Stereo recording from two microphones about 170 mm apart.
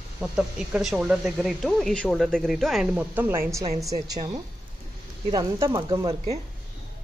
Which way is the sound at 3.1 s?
10° right (ahead or behind).